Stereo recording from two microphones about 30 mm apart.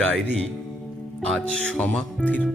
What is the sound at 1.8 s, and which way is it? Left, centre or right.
Speech, left.